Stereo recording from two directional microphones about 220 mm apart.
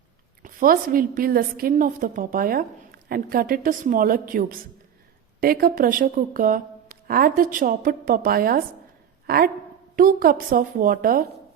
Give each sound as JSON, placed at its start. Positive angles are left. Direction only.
{"t": 0.4, "sound": "a woman's voice", "side_deg": -40}